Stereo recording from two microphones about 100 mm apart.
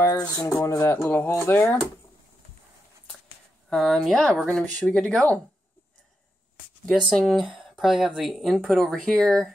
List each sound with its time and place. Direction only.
0.0 s speech: 35° left (ahead or behind); by 1.8 s 20° left (ahead or behind)
3.7 s speech: 5° left (ahead or behind)
7.1 s speech: 5° left (ahead or behind)